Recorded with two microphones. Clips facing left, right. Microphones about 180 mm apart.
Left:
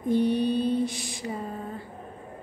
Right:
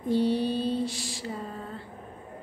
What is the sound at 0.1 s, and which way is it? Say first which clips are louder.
Mantra: left 2 dB; 15° left (ahead or behind).